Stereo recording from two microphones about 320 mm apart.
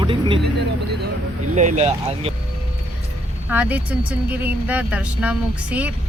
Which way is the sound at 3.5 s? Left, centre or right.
Centre.